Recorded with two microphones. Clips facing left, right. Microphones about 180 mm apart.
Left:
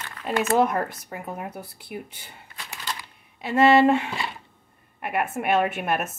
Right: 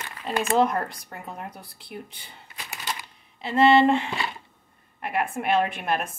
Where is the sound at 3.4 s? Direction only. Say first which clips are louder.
Left 1 dB; 5° left (ahead or behind).